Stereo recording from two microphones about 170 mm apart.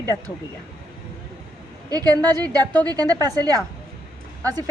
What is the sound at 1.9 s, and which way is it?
A woman's voice, 20° right (ahead or behind).